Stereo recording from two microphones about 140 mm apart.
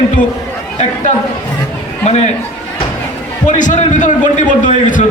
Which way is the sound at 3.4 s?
60° left (ahead or behind).